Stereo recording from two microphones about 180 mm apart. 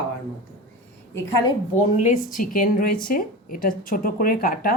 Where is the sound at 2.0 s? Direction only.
45° left (ahead or behind).